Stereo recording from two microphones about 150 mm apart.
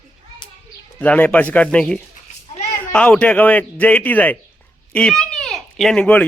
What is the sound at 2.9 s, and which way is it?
Speech, 10° left (ahead or behind).